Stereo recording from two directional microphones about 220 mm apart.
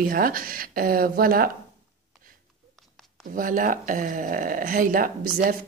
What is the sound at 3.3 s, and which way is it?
A woman's voice, 40° right (ahead or behind).